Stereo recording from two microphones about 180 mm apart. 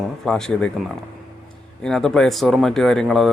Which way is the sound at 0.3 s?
5° left (ahead or behind).